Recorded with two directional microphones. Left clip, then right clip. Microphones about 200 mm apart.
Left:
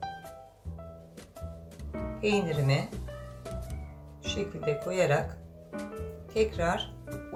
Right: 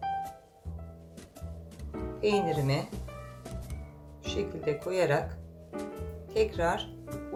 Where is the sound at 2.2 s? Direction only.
35° right (ahead or behind).